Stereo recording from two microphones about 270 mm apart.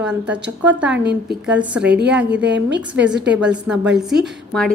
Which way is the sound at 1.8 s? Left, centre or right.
Right.